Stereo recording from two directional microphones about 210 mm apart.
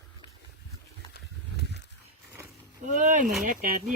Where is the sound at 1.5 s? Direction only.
50° left (ahead or behind).